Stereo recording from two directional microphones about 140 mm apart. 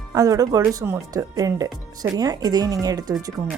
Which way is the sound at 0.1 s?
25° right (ahead or behind).